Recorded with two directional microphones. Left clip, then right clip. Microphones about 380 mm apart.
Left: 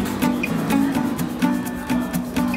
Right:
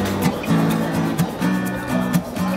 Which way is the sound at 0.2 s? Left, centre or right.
Centre.